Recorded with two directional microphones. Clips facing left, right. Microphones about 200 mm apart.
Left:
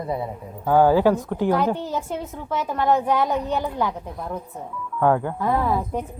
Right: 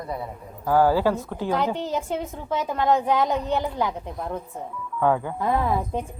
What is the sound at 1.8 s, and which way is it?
Speech, 20° right (ahead or behind).